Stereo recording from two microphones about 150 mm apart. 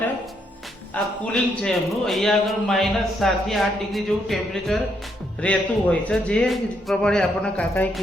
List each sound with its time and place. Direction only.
1.2 s a man's voice: 5° left (ahead or behind)